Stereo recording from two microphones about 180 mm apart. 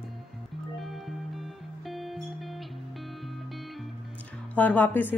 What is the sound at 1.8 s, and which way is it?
Music, centre (ahead or behind).